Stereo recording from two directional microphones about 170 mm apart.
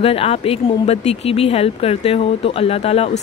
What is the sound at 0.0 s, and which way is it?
Speech, 35° left (ahead or behind).